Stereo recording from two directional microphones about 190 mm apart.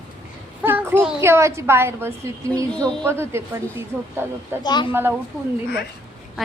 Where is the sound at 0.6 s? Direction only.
10° right (ahead or behind).